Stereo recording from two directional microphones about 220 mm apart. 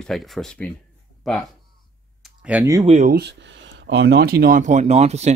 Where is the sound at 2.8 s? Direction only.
35° right (ahead or behind).